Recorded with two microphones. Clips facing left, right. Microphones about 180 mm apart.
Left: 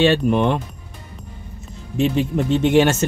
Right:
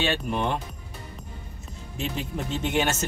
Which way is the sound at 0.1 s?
90° left.